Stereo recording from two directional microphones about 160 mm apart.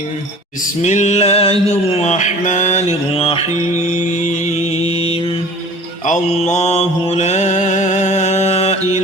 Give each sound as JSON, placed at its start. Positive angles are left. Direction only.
{"t": 0.8, "sound": "mantra", "side_deg": 50}